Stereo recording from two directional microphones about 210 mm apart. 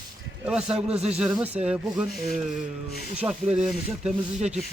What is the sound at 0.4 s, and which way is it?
Speech, 5° right (ahead or behind).